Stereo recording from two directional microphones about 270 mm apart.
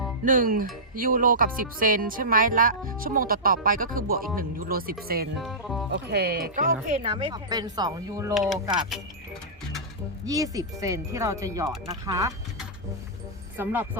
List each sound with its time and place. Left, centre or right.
0.3 s speech: right
5.4 s speech: centre
5.9 s speech: right; by 8.3 s centre
8.3 s speech: centre
10.2 s speech: centre
13.6 s speech: centre